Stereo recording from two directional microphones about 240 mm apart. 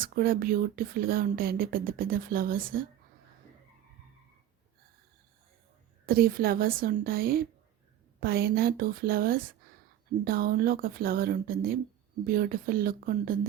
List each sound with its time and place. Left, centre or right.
0.0 s speech: right
6.1 s speech: right